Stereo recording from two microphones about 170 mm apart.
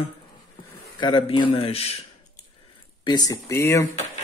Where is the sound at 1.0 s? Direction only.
30° left (ahead or behind).